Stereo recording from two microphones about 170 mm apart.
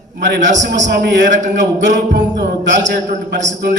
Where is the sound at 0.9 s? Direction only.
90° right.